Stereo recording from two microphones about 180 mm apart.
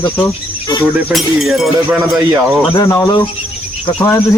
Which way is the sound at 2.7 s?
20° left (ahead or behind).